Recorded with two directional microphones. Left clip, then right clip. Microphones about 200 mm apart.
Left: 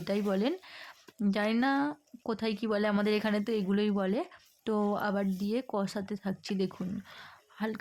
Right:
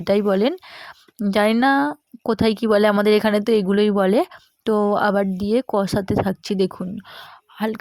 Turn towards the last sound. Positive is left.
turn(degrees=-35)  # may be behind; listen again after turning